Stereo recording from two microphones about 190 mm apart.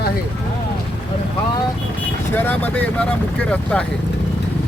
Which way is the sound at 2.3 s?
10° left (ahead or behind).